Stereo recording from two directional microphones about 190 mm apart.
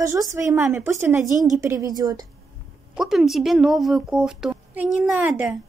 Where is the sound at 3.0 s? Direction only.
Centre (ahead or behind).